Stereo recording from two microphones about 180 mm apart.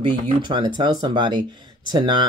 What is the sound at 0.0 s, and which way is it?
Speech, 25° right (ahead or behind).